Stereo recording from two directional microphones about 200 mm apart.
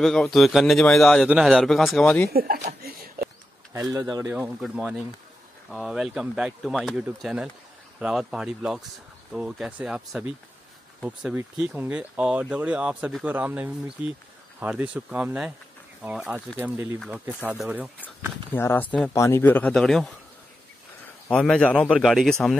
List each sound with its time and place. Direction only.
0.0 s speech: centre (ahead or behind)
2.3 s speech: 45° right (ahead or behind)
3.9 s speech: 15° right (ahead or behind)
4.2 s speech: 5° right (ahead or behind)
18.5 s speech: 10° left (ahead or behind)
21.3 s speech: 5° left (ahead or behind)